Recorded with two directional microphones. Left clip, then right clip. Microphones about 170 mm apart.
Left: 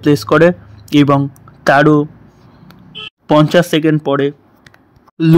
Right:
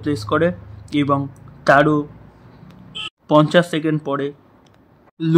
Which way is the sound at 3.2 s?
25° left (ahead or behind).